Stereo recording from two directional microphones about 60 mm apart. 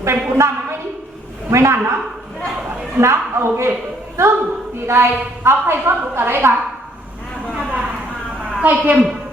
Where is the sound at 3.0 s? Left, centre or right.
Right.